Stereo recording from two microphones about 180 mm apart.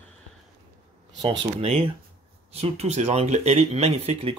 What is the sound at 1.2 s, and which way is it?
Speech, 30° right (ahead or behind).